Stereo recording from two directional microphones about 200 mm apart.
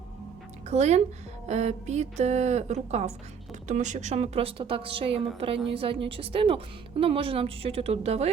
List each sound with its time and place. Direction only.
0.7 s a woman's voice: 35° right (ahead or behind)